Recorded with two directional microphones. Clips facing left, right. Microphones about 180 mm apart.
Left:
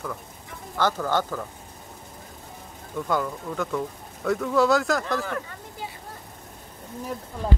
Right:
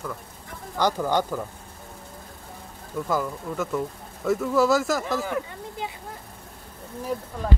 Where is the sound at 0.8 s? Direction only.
15° right (ahead or behind).